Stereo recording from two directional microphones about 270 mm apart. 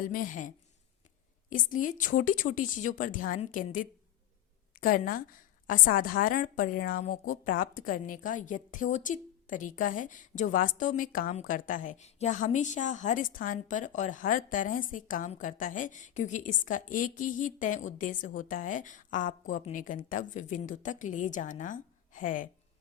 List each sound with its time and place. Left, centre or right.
0.1 s a woman's voice: left